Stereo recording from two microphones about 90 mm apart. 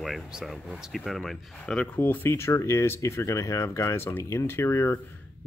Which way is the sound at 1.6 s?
15° left (ahead or behind).